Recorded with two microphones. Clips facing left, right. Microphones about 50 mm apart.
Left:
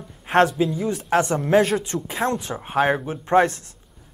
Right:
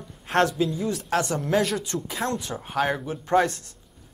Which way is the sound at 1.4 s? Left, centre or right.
Left.